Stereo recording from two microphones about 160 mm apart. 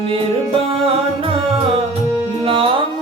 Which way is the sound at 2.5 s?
35° right (ahead or behind).